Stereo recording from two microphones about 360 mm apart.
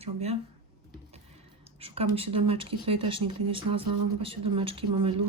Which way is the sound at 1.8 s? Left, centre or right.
Centre.